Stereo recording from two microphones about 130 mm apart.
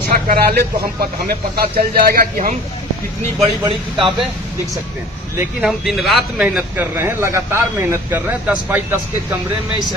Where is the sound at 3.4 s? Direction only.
40° right (ahead or behind).